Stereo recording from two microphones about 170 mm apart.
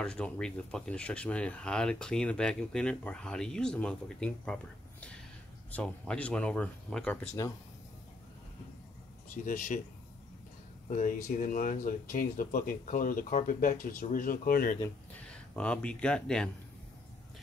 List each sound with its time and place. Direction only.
0.0 s speech: 5° left (ahead or behind)
5.7 s speech: 10° left (ahead or behind)
7.4 s speech: 20° left (ahead or behind)
9.3 s speech: 50° left (ahead or behind)
11.2 s speech: 55° left (ahead or behind)
15.1 s speech: 5° left (ahead or behind)